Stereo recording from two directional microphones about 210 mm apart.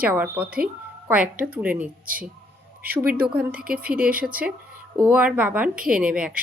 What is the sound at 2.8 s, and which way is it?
Speech, 45° right (ahead or behind).